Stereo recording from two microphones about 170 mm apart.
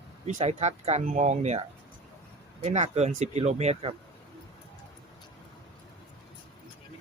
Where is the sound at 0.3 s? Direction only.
45° right (ahead or behind).